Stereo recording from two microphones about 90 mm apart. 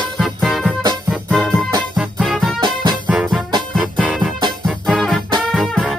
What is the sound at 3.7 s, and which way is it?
Music, centre (ahead or behind).